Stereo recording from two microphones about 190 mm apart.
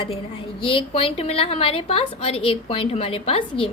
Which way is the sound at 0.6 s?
30° left (ahead or behind).